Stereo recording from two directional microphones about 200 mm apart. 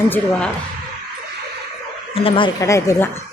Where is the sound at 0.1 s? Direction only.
5° left (ahead or behind).